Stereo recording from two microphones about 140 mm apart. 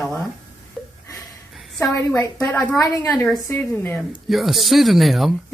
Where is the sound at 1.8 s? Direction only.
20° left (ahead or behind).